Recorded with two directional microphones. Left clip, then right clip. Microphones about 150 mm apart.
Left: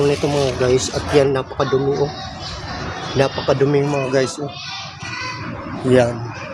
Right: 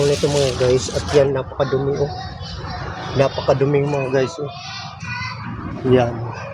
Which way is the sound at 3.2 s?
15° left (ahead or behind).